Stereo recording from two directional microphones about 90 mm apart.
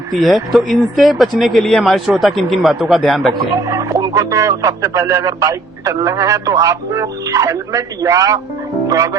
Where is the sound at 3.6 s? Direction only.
40° right (ahead or behind).